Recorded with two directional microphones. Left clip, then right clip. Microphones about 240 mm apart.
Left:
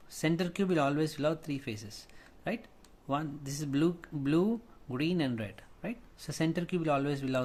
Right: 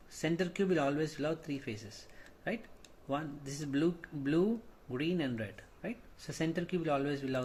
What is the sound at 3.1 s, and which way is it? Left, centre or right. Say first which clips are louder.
Speech: left 3 dB; left.